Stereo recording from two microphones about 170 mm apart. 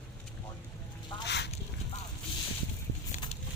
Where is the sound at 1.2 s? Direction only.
90° left.